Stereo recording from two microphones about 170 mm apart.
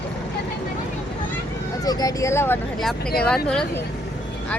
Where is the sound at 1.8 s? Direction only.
20° left (ahead or behind).